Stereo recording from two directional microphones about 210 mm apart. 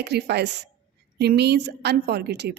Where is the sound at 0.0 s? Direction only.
50° right (ahead or behind).